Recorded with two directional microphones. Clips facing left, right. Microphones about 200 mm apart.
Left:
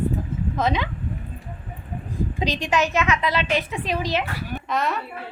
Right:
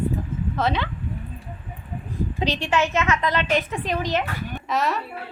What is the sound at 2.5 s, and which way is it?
Speech, 35° left (ahead or behind).